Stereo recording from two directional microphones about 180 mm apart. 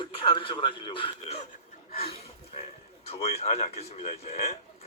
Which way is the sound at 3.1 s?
35° left (ahead or behind).